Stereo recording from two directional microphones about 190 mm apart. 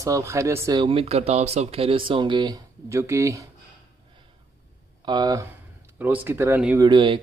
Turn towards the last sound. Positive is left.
turn(degrees=-25)  # may be behind; listen again after turning